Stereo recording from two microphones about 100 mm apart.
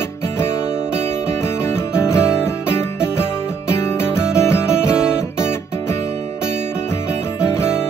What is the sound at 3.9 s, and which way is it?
Music, 25° left (ahead or behind).